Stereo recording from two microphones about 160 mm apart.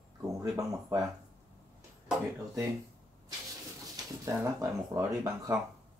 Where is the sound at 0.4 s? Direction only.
20° right (ahead or behind).